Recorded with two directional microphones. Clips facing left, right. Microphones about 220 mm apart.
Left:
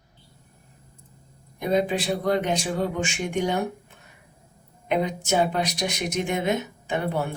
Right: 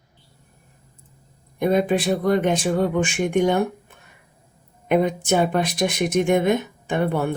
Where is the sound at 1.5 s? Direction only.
55° right (ahead or behind).